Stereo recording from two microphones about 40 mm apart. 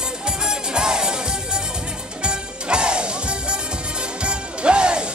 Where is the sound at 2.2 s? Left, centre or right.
Right.